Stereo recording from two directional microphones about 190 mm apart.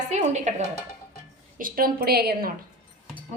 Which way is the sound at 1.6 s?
50° right (ahead or behind).